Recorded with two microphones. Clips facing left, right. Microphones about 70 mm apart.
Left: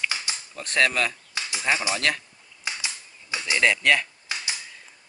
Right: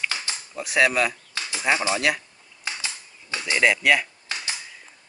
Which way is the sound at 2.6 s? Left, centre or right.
Centre.